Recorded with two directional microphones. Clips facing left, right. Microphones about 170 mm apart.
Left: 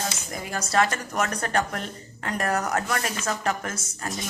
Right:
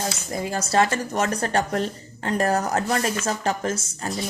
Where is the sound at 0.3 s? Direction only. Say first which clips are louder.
Right 3 dB; 30° right (ahead or behind).